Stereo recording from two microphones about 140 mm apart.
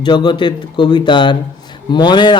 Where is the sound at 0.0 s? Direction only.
30° left (ahead or behind).